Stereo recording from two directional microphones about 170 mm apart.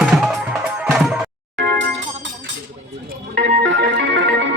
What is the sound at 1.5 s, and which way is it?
Music, 90° right.